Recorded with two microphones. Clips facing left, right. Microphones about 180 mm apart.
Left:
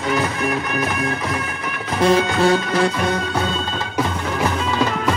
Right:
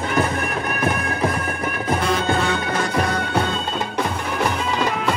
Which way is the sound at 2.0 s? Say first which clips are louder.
Left 9 dB; 35° left (ahead or behind).